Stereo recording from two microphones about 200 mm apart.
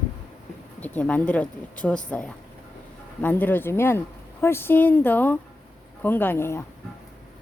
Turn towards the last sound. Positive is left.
turn(degrees=10)  # may be behind; listen again after turning